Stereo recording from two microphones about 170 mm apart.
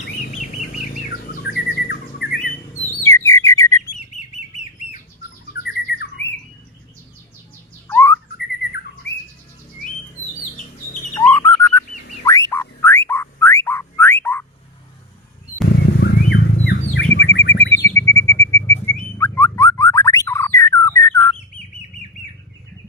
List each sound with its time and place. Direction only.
0.3 s bird: 55° left (ahead or behind)
1.3 s bird: 65° left (ahead or behind)
3.0 s bird: 15° left (ahead or behind)
5.6 s bird: 75° left (ahead or behind)
7.9 s bird: 15° left (ahead or behind)
11.1 s bird: 15° left (ahead or behind)
11.9 s a sound: 50° left (ahead or behind)
12.2 s whistling: 20° left (ahead or behind)
16.0 s bird: 80° left
17.7 s bird: 15° left (ahead or behind)